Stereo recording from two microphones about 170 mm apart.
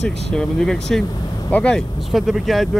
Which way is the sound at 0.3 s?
5° left (ahead or behind).